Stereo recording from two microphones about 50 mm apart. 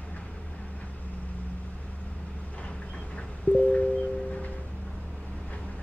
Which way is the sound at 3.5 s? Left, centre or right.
Left.